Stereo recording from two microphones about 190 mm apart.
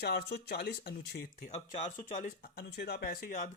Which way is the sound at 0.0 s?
60° left (ahead or behind).